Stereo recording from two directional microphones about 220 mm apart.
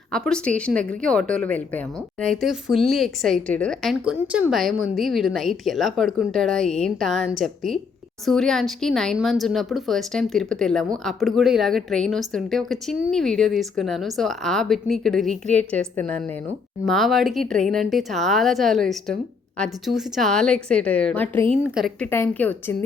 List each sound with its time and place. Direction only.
0.1 s a woman's voice: 5° left (ahead or behind)